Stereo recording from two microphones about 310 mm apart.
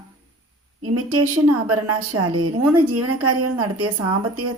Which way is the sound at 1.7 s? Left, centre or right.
Right.